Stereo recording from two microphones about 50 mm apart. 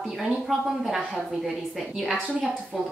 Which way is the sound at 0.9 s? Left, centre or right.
Centre.